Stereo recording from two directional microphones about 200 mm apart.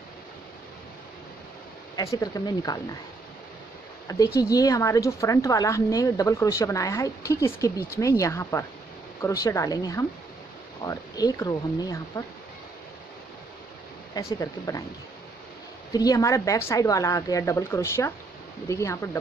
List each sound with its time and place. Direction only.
2.0 s speech: 15° left (ahead or behind)
4.4 s a woman's voice: 20° left (ahead or behind)
14.1 s speech: 20° left (ahead or behind)
15.9 s a woman's voice: 20° left (ahead or behind)